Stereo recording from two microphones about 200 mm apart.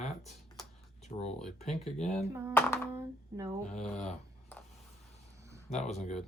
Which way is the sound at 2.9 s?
15° right (ahead or behind).